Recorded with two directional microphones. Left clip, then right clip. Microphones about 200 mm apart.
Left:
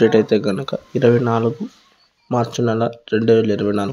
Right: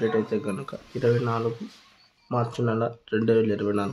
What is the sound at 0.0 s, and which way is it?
Speech, 35° left (ahead or behind).